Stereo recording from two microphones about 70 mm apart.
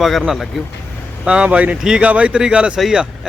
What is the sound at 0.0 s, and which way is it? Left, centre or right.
Speech, centre.